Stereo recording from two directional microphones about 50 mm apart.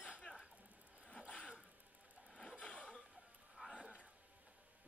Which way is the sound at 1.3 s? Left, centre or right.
Left.